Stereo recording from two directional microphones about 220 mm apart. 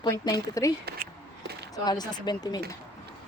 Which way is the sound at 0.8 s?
45° right (ahead or behind).